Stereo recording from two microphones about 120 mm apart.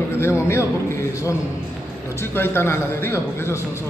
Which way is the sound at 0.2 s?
20° left (ahead or behind).